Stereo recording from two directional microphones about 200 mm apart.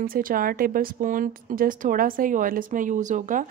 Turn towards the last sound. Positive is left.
turn(degrees=-40)  # may be behind; listen again after turning